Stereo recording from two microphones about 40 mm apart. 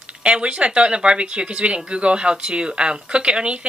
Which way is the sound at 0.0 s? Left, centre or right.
Right.